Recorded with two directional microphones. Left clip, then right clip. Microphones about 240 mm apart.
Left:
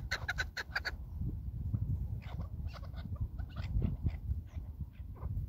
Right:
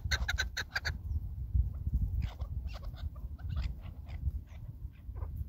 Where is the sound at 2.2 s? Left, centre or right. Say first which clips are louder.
Right 1 dB; right.